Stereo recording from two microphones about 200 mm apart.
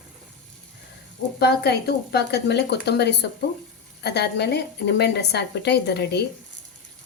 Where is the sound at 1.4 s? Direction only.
55° left (ahead or behind).